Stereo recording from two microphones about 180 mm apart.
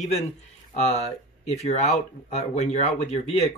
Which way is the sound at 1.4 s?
40° left (ahead or behind).